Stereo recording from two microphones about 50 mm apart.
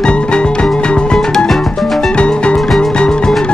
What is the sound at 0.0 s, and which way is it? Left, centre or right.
Music, centre.